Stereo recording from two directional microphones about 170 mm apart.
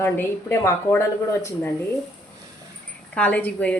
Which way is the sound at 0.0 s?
15° left (ahead or behind).